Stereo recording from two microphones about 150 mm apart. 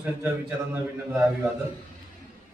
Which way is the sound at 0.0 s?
10° right (ahead or behind).